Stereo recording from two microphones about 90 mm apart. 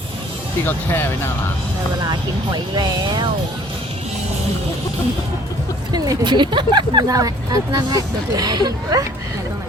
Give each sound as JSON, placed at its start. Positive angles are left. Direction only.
{"t": 0.6, "sound": "speech", "side_deg": 25}
{"t": 2.0, "sound": "speech", "side_deg": -55}
{"t": 5.9, "sound": "speech", "side_deg": -50}